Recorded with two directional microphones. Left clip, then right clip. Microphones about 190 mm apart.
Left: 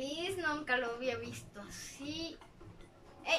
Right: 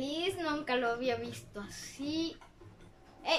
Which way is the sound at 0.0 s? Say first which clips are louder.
Right 2 dB; 20° right (ahead or behind).